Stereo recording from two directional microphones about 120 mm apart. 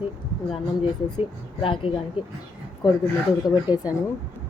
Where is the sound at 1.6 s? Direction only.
45° left (ahead or behind).